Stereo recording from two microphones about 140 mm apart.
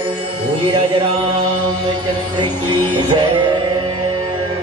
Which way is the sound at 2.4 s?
35° right (ahead or behind).